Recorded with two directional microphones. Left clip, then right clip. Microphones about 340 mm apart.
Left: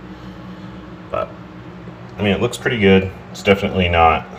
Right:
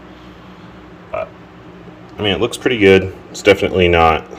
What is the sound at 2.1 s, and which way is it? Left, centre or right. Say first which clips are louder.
Speech: right 2 dB; right.